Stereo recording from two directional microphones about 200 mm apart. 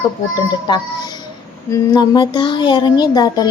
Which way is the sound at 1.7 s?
20° left (ahead or behind).